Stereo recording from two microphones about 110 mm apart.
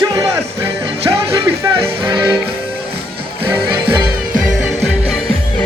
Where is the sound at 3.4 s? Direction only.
50° right (ahead or behind).